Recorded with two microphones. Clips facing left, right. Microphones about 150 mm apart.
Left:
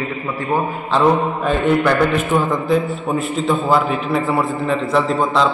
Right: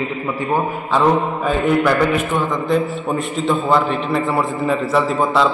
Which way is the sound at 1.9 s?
Centre (ahead or behind).